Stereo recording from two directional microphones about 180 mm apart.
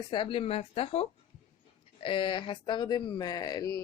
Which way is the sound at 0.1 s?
30° left (ahead or behind).